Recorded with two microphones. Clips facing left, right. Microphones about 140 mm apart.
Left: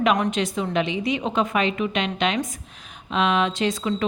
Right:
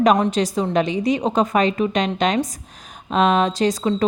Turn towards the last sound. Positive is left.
turn(degrees=-40)  # may be behind; listen again after turning